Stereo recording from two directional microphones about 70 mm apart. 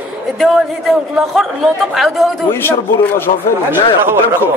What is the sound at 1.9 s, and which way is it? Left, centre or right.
Speech, centre.